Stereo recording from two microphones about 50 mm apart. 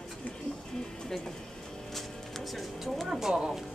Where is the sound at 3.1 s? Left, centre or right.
Centre.